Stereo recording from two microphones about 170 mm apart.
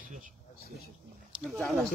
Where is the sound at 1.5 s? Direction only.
Centre (ahead or behind).